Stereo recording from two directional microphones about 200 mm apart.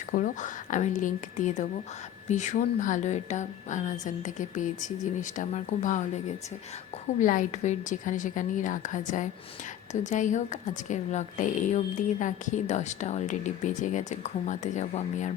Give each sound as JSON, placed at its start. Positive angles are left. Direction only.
{"t": 0.2, "sound": "a woman's voice", "side_deg": 40}
{"t": 7.2, "sound": "a woman's voice", "side_deg": 40}